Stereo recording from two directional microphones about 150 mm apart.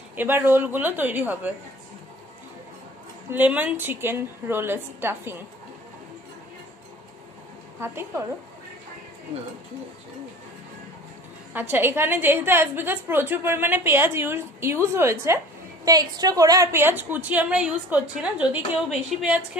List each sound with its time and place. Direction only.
0.1 s a woman's voice: 15° right (ahead or behind)
3.3 s a woman's voice: 10° right (ahead or behind)
7.8 s a woman's voice: 15° right (ahead or behind)
11.5 s a woman's voice: 15° right (ahead or behind)